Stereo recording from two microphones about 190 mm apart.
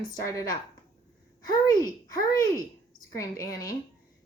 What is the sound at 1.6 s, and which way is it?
A woman's voice, 20° left (ahead or behind).